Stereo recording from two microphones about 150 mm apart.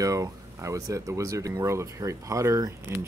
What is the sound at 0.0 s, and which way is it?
Speech, 20° right (ahead or behind).